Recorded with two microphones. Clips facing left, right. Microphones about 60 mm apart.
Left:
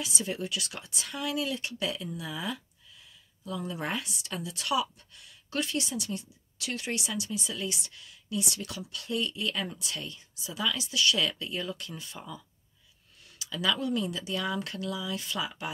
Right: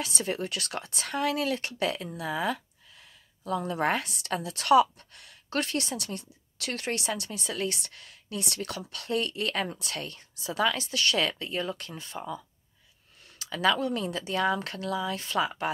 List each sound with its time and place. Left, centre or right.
0.0 s speech: right
13.4 s speech: right